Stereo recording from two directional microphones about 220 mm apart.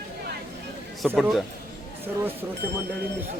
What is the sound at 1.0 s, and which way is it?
Speech, centre (ahead or behind).